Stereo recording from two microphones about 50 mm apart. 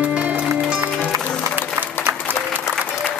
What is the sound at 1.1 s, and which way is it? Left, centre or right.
Music, right.